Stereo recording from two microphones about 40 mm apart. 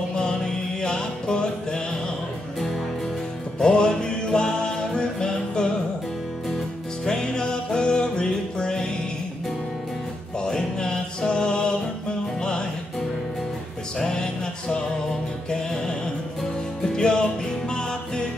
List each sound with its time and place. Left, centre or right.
0.2 s music: centre
3.5 s music: centre
7.1 s music: centre
10.4 s music: centre
14.0 s music: centre